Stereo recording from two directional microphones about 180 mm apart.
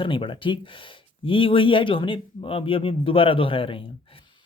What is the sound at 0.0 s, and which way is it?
Speech, 30° left (ahead or behind).